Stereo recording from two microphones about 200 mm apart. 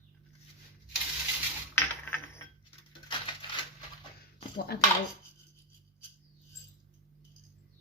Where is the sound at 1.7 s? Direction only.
10° left (ahead or behind).